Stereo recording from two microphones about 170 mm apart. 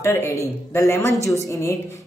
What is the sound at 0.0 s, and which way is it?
A man's voice, 15° left (ahead or behind).